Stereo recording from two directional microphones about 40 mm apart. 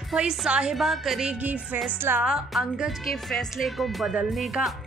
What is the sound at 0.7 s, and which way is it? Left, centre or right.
Speech, centre.